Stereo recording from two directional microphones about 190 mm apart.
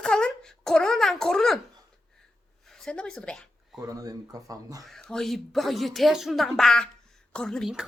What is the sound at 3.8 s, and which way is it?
Speech, 20° right (ahead or behind).